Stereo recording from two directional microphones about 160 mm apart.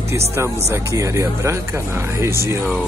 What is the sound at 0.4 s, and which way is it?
Speech, 20° right (ahead or behind).